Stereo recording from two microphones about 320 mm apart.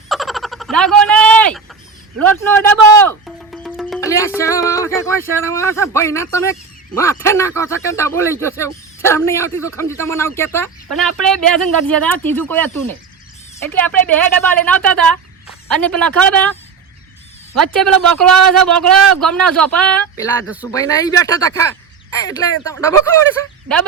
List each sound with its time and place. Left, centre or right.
0.1 s a sound: centre
2.1 s music: centre
4.4 s speech: centre
17.7 s speech: centre
17.9 s speech: right
18.7 s speech: centre
20.7 s speech: centre